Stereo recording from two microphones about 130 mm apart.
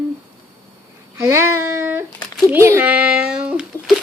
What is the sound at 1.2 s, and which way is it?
Child singing, 20° right (ahead or behind).